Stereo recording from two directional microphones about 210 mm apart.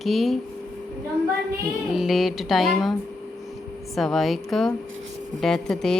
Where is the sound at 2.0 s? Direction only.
Centre (ahead or behind).